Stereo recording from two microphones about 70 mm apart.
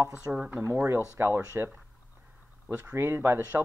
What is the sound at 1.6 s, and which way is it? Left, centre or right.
Speech, right.